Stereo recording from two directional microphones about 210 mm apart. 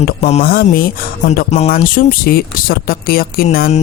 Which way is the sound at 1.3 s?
30° left (ahead or behind).